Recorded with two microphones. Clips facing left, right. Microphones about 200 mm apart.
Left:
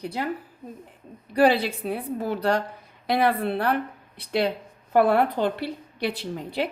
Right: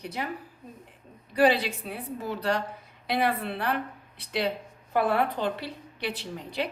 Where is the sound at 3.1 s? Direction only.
45° left (ahead or behind).